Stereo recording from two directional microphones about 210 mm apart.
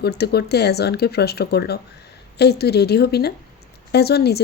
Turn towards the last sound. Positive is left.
turn(degrees=50)  # may be behind; listen again after turning